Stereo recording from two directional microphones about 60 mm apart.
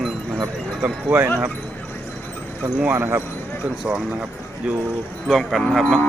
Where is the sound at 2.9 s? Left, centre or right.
Right.